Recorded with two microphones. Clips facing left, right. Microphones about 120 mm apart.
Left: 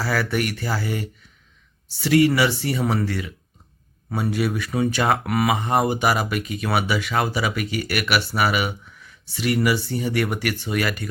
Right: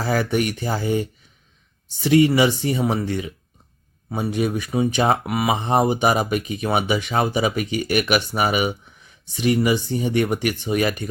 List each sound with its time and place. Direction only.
0.0 s speech: 20° right (ahead or behind)